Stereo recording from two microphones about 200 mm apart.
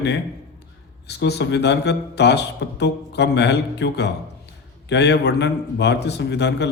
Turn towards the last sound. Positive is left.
turn(degrees=60)  # may be behind; listen again after turning